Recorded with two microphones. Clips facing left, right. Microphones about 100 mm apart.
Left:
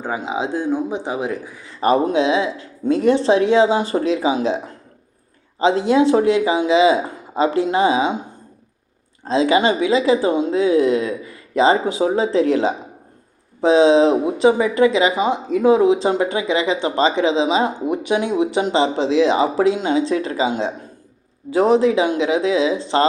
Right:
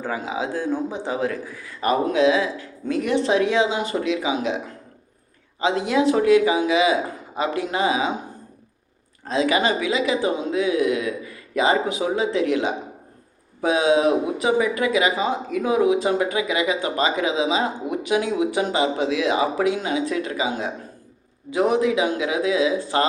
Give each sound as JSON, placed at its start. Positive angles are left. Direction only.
{"t": 0.0, "sound": "speech", "side_deg": 20}
{"t": 1.8, "sound": "a woman's voice", "side_deg": 30}
{"t": 9.2, "sound": "a woman's voice", "side_deg": 30}